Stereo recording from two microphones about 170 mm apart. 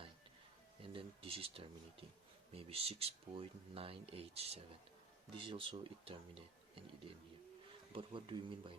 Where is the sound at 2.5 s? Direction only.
35° right (ahead or behind).